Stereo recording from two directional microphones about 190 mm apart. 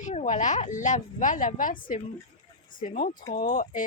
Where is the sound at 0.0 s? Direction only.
35° left (ahead or behind).